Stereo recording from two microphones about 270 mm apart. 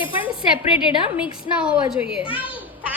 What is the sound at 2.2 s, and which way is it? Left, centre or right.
Speech, centre.